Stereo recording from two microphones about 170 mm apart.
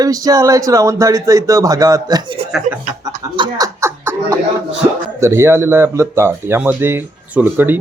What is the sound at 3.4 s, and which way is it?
Speech, 20° right (ahead or behind).